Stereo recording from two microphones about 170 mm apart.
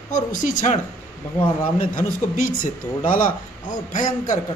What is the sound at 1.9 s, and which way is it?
A woman's voice, 50° left (ahead or behind).